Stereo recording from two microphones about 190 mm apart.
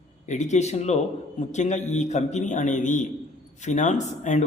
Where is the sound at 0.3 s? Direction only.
40° left (ahead or behind).